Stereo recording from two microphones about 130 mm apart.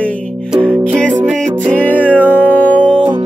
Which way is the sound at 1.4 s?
10° left (ahead or behind).